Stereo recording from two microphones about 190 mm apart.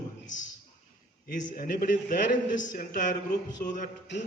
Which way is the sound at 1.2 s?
45° left (ahead or behind).